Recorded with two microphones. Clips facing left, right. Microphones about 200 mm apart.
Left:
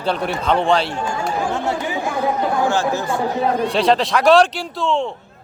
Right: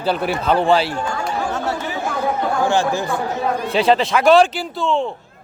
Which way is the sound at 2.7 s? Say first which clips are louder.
Right 1 dB; 15° right (ahead or behind).